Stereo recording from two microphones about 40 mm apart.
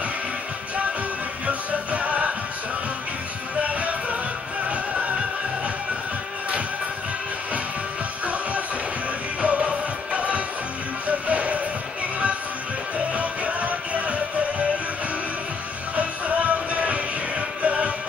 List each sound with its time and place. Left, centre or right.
1.4 s music: right
3.6 s music: right
9.4 s music: right
13.1 s music: right
16.0 s music: right